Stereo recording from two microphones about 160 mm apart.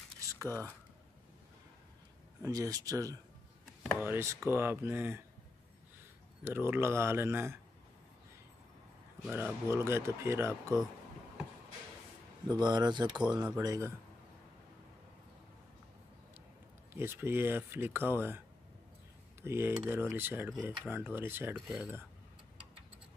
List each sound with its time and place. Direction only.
0.5 s speech: 10° left (ahead or behind)
2.4 s speech: 20° right (ahead or behind)
6.4 s speech: 15° right (ahead or behind)
9.3 s speech: 15° right (ahead or behind)
12.4 s speech: 25° right (ahead or behind)
13.1 s speech: 5° right (ahead or behind)
13.5 s speech: 20° right (ahead or behind)
16.9 s speech: 15° right (ahead or behind)
19.4 s speech: 15° right (ahead or behind)
21.5 s speech: centre (ahead or behind)